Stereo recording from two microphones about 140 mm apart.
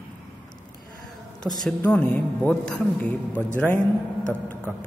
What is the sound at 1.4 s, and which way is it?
A woman's voice, 5° left (ahead or behind).